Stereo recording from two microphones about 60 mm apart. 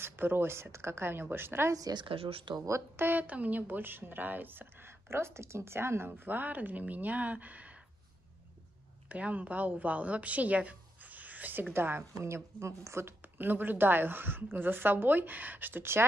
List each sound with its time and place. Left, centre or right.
0.0 s a woman's voice: right
1.7 s a woman's voice: right
3.0 s a woman's voice: right
5.1 s a woman's voice: right
9.1 s a woman's voice: right
12.2 s speech: right
13.2 s a woman's voice: right